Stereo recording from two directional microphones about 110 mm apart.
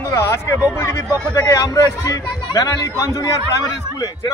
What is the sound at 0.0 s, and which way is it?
Speech, 25° left (ahead or behind).